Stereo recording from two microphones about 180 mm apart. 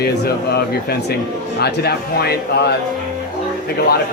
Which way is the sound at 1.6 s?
60° left (ahead or behind).